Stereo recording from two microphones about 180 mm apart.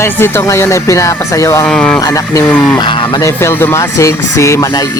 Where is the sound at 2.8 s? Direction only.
25° left (ahead or behind).